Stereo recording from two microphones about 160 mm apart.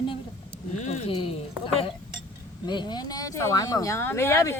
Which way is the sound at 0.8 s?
45° left (ahead or behind).